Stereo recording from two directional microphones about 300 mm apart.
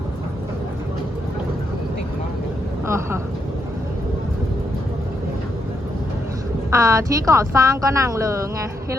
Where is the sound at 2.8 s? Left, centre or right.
Centre.